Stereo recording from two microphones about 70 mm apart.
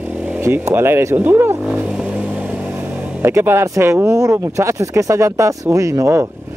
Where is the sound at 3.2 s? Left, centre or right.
Right.